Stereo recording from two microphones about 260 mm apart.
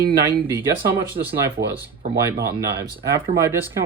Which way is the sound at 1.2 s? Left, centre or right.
Right.